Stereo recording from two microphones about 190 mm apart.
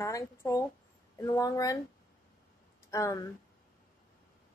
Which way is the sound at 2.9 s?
20° left (ahead or behind).